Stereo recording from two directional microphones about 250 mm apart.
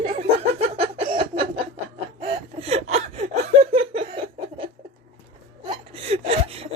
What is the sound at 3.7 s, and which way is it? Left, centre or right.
Laughter, right.